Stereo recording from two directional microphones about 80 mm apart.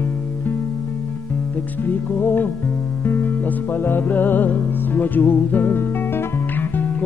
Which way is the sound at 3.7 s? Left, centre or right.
Left.